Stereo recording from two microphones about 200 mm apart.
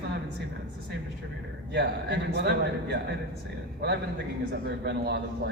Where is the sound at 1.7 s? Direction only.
60° right (ahead or behind).